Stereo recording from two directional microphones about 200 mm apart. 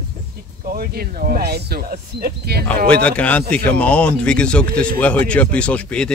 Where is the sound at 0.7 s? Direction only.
50° right (ahead or behind).